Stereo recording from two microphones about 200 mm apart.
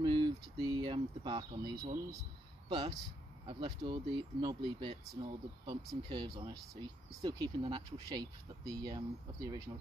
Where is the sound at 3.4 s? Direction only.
25° right (ahead or behind).